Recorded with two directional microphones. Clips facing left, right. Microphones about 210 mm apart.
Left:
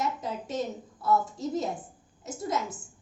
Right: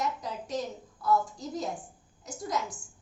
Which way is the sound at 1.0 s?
25° left (ahead or behind).